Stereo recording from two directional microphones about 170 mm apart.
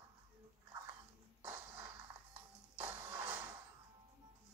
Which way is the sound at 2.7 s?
10° right (ahead or behind).